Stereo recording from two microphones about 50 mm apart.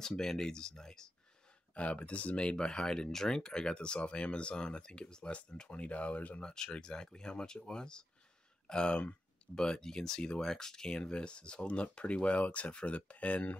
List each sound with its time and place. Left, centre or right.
0.0 s speech: centre
1.7 s speech: left
6.4 s speech: centre